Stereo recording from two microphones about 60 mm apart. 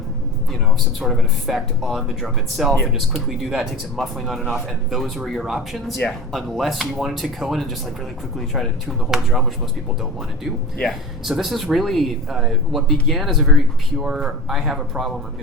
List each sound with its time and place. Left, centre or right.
0.9 s speech: centre
9.0 s speech: centre
14.4 s speech: centre